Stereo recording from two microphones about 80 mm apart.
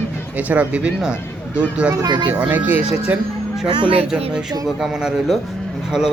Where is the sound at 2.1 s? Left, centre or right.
Right.